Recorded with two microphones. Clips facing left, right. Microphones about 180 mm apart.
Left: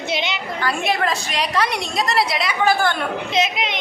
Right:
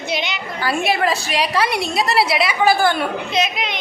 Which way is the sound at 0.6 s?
5° right (ahead or behind).